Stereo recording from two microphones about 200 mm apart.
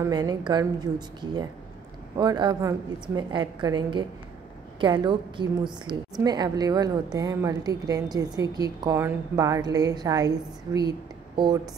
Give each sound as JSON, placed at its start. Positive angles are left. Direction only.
{"t": 0.0, "sound": "a woman's voice", "side_deg": -20}